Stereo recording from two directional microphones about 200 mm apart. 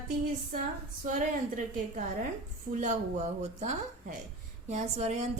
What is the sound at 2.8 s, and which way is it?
A woman's voice, 35° right (ahead or behind).